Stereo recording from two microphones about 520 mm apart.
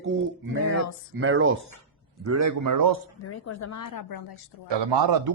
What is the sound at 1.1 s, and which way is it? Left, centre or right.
A man's voice, right.